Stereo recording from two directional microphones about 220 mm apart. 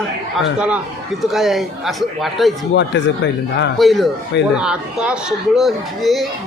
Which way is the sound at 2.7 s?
55° left (ahead or behind).